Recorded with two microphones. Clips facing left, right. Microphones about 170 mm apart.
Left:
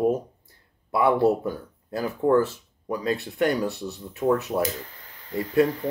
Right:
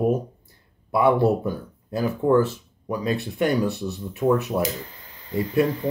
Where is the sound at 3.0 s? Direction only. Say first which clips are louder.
Even; 20° right (ahead or behind).